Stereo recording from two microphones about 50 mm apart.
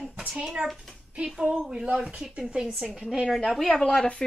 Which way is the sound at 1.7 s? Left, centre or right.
Centre.